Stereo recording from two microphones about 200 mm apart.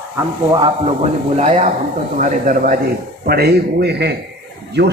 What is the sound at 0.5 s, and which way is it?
A man's voice, 25° right (ahead or behind).